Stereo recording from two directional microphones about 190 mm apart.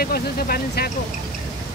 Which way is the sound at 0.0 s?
55° left (ahead or behind).